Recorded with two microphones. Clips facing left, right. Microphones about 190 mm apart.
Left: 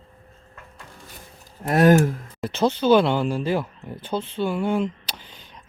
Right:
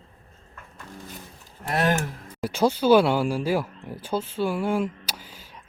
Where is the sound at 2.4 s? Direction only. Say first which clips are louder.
Even; 10° right (ahead or behind).